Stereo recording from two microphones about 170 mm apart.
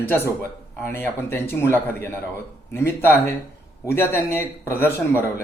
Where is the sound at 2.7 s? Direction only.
15° left (ahead or behind).